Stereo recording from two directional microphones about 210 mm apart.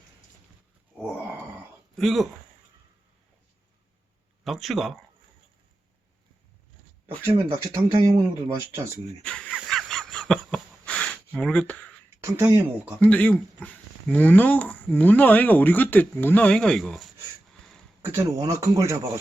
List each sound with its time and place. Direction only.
2.0 s speech: centre (ahead or behind)
4.4 s speech: centre (ahead or behind)
7.3 s speech: 15° right (ahead or behind)
9.2 s a sound: 5° left (ahead or behind)
11.3 s speech: 5° left (ahead or behind)
12.2 s speech: 10° right (ahead or behind)
13.0 s speech: 5° left (ahead or behind)
18.0 s speech: 10° right (ahead or behind)